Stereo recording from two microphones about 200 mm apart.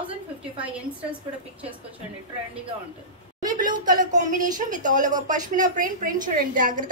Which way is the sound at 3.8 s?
40° right (ahead or behind).